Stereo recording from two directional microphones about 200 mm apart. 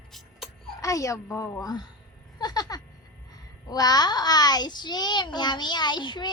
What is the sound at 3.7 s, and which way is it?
A child's voice, 20° left (ahead or behind).